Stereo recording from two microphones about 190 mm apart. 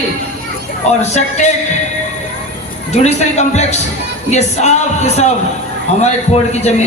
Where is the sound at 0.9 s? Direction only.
35° left (ahead or behind).